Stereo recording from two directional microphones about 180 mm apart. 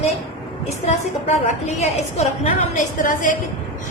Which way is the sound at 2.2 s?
40° left (ahead or behind).